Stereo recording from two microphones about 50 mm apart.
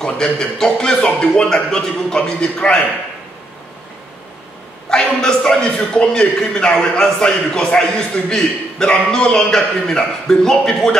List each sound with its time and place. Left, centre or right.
0.0 s a man's voice: centre
4.8 s a man's voice: centre